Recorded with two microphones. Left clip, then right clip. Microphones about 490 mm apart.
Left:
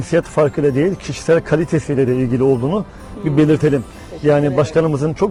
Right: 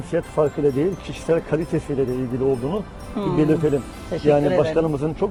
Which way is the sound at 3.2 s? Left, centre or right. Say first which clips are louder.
Left 2 dB; right.